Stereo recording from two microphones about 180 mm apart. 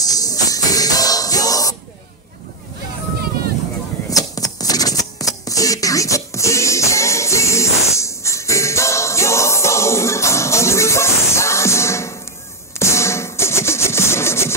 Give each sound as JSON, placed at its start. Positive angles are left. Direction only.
{"t": 0.0, "sound": "music", "side_deg": 20}
{"t": 4.1, "sound": "shuffling cards", "side_deg": 20}
{"t": 12.7, "sound": "sawing", "side_deg": 15}